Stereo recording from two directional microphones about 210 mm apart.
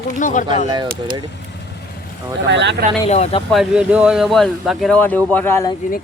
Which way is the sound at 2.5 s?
55° right (ahead or behind).